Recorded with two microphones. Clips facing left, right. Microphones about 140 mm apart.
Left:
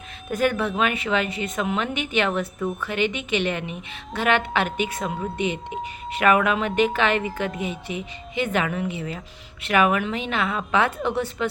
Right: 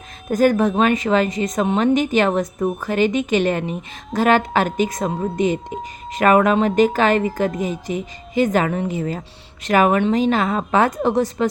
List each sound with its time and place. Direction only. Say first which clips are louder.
0.3 s a woman's voice: right 7 dB; 40° right (ahead or behind)